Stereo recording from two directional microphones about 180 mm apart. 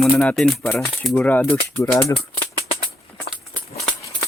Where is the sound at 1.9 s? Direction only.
20° left (ahead or behind).